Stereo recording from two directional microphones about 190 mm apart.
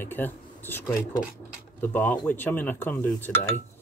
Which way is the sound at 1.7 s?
10° left (ahead or behind).